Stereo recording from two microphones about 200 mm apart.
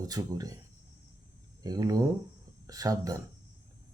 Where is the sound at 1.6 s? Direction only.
20° right (ahead or behind).